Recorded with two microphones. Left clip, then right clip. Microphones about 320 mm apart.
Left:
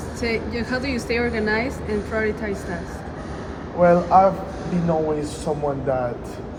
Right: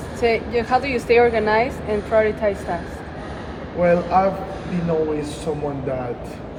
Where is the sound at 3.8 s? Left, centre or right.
Centre.